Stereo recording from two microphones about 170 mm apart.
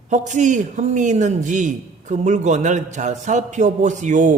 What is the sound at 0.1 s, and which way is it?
A man's voice, 45° right (ahead or behind).